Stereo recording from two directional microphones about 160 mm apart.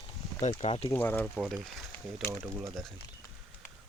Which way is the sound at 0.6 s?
40° left (ahead or behind).